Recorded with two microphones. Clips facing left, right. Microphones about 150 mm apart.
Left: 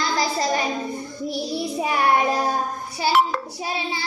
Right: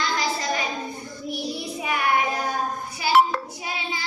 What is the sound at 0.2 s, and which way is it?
Child singing, 35° left (ahead or behind).